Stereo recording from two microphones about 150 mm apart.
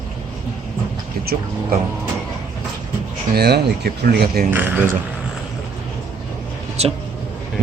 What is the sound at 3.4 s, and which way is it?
Speech, 90° right.